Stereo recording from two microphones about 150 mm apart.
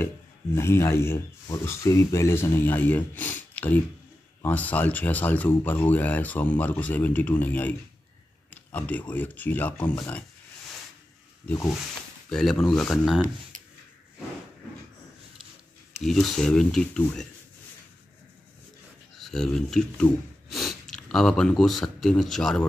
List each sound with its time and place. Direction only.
0.6 s speech: 15° left (ahead or behind)
8.7 s speech: 10° left (ahead or behind)
11.4 s speech: 20° left (ahead or behind)
12.3 s speech: 5° left (ahead or behind)
16.0 s speech: centre (ahead or behind)
19.1 s speech: centre (ahead or behind)